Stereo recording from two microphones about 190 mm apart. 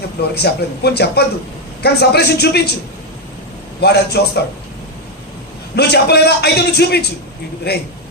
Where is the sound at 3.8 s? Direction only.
60° left (ahead or behind).